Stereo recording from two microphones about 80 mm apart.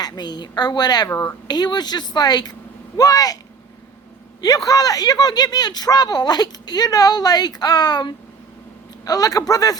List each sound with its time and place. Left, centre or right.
0.0 s a man's voice: left
4.4 s a man's voice: left